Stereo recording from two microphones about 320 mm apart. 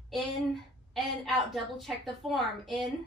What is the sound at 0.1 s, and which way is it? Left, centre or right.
A woman's voice, centre.